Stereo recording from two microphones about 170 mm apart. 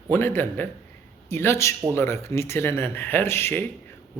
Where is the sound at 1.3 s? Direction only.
15° left (ahead or behind).